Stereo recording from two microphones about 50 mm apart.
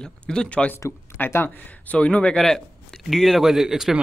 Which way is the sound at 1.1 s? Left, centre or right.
Left.